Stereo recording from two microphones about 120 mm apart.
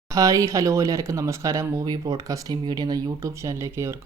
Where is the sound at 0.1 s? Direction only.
25° right (ahead or behind).